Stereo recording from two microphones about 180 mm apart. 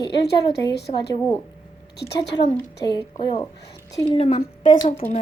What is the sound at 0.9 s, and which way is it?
Speech, 30° left (ahead or behind).